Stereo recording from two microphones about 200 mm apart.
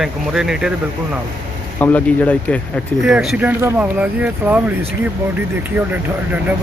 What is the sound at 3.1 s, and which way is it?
Speech, 5° right (ahead or behind).